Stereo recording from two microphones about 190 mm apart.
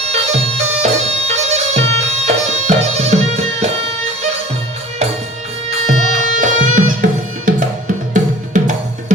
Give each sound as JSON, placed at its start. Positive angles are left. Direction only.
{"t": 0.0, "sound": "bagpipes", "side_deg": -35}
{"t": 5.7, "sound": "music", "side_deg": -40}